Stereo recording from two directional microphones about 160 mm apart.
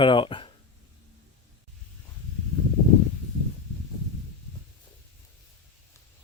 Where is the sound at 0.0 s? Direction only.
30° left (ahead or behind).